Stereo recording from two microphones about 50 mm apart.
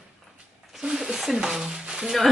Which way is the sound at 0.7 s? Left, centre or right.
Centre.